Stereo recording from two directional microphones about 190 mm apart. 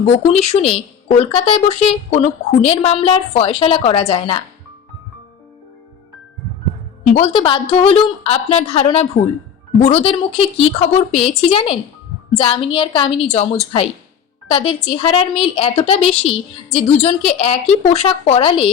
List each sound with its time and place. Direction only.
0.3 s a woman's voice: 35° left (ahead or behind)
7.1 s a woman's voice: 30° left (ahead or behind)